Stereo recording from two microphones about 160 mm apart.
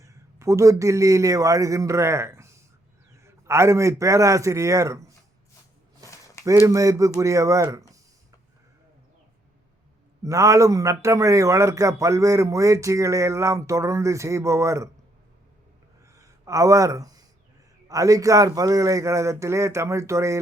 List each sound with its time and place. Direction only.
0.0 s a man's voice: 20° right (ahead or behind)
6.4 s a man's voice: 20° right (ahead or behind)
10.2 s a man's voice: 20° right (ahead or behind)
16.1 s a sound: 20° right (ahead or behind)
17.8 s a man's voice: 20° right (ahead or behind)